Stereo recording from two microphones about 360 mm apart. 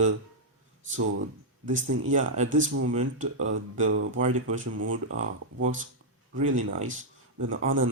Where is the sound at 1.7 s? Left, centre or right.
Right.